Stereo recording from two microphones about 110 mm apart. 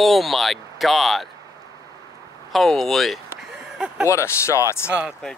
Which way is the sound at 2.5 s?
5° left (ahead or behind).